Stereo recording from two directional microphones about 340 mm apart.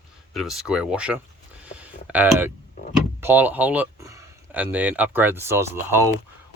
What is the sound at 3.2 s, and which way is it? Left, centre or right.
Speech, centre.